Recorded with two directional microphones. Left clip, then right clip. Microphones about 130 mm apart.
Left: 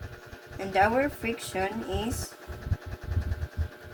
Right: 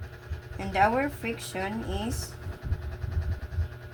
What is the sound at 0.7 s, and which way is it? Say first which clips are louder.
Speech: even; 30° right (ahead or behind).